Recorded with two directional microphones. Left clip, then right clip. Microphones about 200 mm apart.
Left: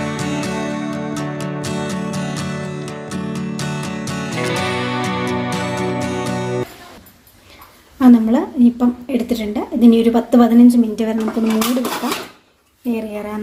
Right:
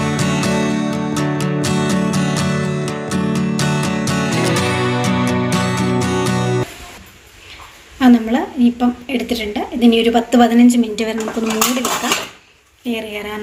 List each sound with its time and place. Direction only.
0.0 s music: centre (ahead or behind)
7.9 s a woman's voice: 45° left (ahead or behind); by 11.2 s 25° left (ahead or behind)
12.9 s speech: 35° left (ahead or behind)